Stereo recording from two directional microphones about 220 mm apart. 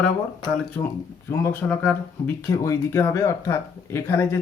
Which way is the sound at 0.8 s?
15° left (ahead or behind).